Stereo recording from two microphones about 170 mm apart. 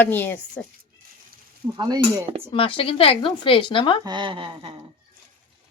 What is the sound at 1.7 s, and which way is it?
Speech, 20° right (ahead or behind).